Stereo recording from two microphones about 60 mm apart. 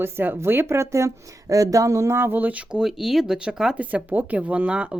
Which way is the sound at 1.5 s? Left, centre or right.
Right.